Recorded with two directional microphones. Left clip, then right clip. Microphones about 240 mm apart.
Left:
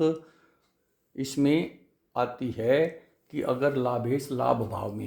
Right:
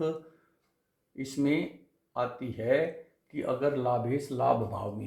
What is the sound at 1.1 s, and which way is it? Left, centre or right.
Speech, left.